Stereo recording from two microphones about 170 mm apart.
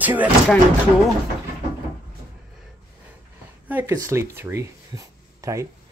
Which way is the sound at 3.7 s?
15° right (ahead or behind).